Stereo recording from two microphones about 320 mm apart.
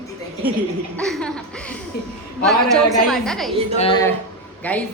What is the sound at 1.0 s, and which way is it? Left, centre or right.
Laughter, centre.